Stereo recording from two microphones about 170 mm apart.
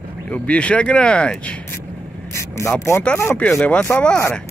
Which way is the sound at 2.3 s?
15° left (ahead or behind).